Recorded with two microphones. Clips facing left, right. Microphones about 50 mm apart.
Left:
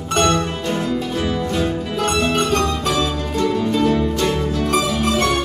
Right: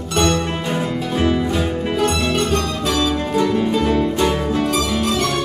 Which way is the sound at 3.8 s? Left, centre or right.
Centre.